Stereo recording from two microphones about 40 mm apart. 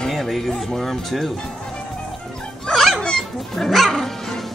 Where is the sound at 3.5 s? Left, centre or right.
Centre.